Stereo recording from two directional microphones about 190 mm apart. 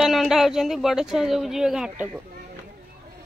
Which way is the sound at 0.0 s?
Centre (ahead or behind).